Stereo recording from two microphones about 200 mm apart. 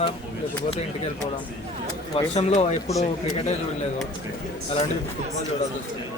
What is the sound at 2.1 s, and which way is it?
Speech, 35° left (ahead or behind).